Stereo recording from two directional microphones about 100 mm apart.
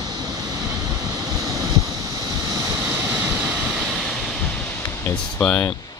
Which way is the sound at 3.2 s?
15° right (ahead or behind).